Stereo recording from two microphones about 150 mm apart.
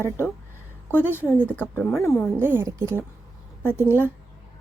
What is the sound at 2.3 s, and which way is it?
A woman's voice, 15° right (ahead or behind).